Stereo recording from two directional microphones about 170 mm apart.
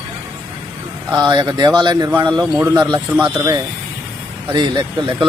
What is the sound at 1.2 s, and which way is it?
Speech, 25° right (ahead or behind).